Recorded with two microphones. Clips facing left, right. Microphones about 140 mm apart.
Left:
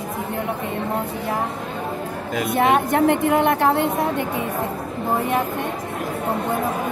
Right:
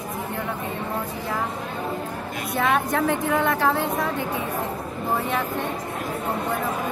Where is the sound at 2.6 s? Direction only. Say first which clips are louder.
Left 4 dB; 20° left (ahead or behind).